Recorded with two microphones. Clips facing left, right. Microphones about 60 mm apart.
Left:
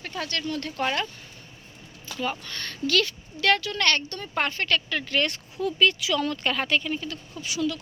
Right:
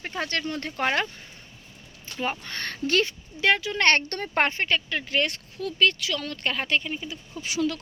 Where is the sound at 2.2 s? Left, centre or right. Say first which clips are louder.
Right 1 dB; right.